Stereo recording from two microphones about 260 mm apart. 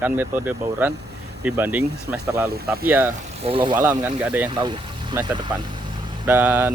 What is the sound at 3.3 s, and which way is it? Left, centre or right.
Speech, right.